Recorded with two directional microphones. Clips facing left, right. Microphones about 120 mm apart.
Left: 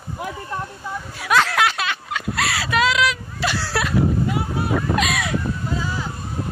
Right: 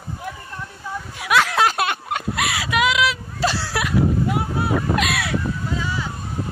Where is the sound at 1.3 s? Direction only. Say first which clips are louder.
Even; 5° right (ahead or behind).